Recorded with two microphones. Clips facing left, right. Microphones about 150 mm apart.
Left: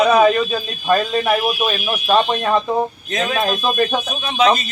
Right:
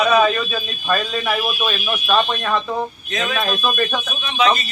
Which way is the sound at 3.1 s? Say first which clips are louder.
Left 2 dB; 35° left (ahead or behind).